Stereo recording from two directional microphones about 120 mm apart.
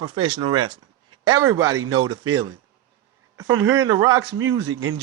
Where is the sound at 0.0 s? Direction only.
40° right (ahead or behind).